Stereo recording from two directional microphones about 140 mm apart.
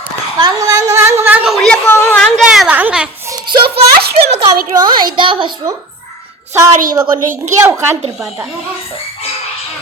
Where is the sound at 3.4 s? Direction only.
40° right (ahead or behind).